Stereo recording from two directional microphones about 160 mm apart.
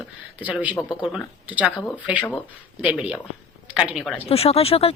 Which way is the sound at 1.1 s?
5° right (ahead or behind).